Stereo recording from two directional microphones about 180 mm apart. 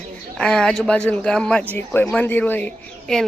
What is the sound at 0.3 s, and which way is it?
A woman's voice, 5° left (ahead or behind).